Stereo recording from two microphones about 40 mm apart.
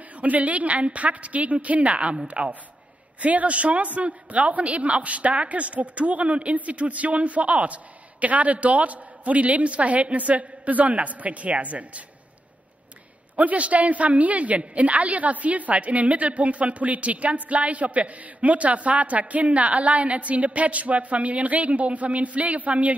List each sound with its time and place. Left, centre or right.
0.2 s a woman's voice: right
13.4 s a woman's voice: right